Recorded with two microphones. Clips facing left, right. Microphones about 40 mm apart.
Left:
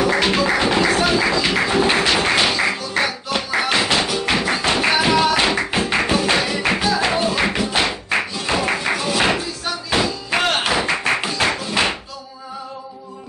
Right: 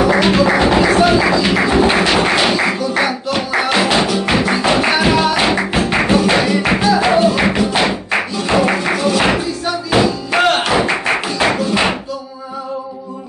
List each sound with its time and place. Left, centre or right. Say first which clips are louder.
0.0 s music: right 5 dB; centre